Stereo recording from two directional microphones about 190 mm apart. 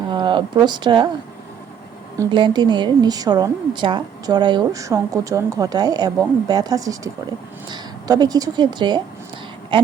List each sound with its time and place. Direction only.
0.1 s speech: 25° right (ahead or behind)
2.1 s a woman's voice: 25° right (ahead or behind)
9.7 s a sound: 25° right (ahead or behind)